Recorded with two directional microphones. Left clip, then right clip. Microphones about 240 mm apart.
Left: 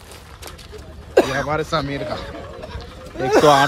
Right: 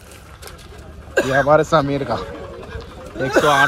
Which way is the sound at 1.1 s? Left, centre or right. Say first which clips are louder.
Left 1 dB; left.